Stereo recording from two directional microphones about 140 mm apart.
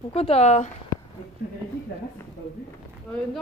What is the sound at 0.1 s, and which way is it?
Speech, 45° left (ahead or behind).